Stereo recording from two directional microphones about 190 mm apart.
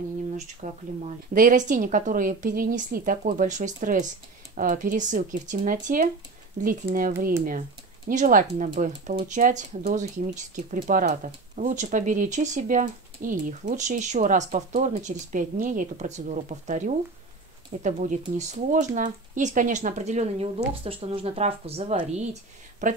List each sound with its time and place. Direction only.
0.6 s speech: 45° right (ahead or behind)